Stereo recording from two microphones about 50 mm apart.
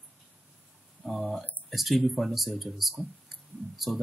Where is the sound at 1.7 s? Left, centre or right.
Centre.